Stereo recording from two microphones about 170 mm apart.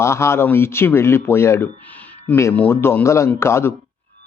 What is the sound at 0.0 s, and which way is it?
Speech, 15° left (ahead or behind).